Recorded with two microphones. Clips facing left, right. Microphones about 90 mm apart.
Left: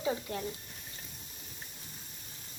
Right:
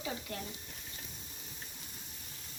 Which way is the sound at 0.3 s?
20° left (ahead or behind).